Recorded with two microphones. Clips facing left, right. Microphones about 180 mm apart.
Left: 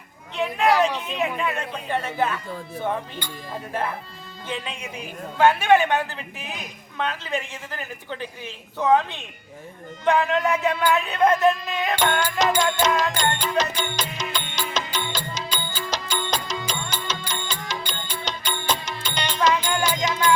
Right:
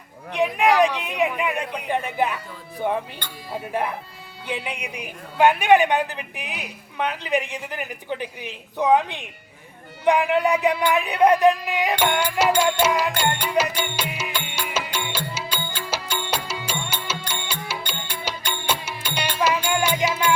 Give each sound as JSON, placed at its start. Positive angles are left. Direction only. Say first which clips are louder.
{"t": 0.3, "sound": "a man's voice", "louder": "right 2 dB", "side_deg": -15}
{"t": 12.8, "sound": "music", "louder": "right 1 dB", "side_deg": -10}